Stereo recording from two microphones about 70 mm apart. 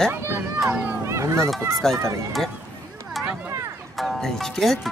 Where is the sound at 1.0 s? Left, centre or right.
Right.